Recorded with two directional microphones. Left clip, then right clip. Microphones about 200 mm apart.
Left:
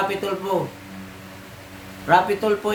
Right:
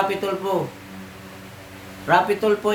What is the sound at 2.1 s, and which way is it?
Mantra, 10° right (ahead or behind).